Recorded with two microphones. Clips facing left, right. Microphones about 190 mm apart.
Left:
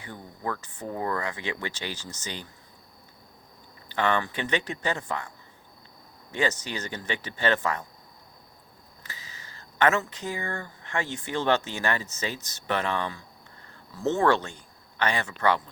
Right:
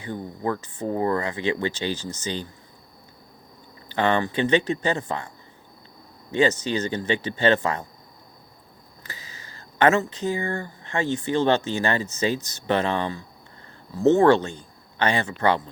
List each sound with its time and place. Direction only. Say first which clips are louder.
0.1 s speech: right 7 dB; 20° right (ahead or behind)
3.9 s speech: right 4 dB; 30° right (ahead or behind)
6.3 s speech: right 7 dB; 25° right (ahead or behind)
9.0 s a sound: right 3 dB; 40° right (ahead or behind)
10.0 s speech: right 7 dB; 20° right (ahead or behind)